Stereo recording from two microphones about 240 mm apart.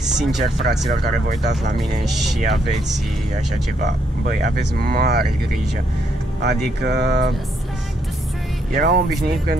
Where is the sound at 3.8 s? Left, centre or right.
Right.